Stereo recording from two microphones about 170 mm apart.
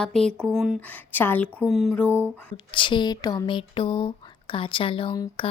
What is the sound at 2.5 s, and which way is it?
Speech, 30° left (ahead or behind).